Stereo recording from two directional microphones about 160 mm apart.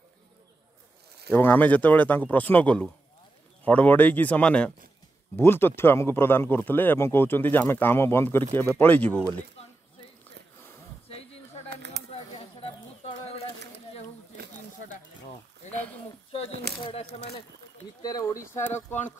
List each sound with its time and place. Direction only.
1.3 s speech: 10° left (ahead or behind)
11.7 s a sound: 90° right
12.1 s bird: 35° left (ahead or behind)
15.7 s a sound: 10° left (ahead or behind)
16.8 s speech: 35° left (ahead or behind)
18.0 s speech: 20° left (ahead or behind)